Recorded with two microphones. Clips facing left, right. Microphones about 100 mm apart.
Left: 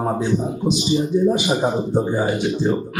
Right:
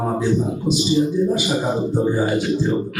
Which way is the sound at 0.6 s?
20° left (ahead or behind).